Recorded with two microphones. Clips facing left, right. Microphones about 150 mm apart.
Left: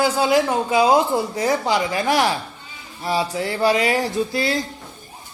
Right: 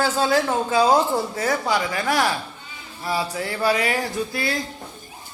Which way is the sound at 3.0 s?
20° left (ahead or behind).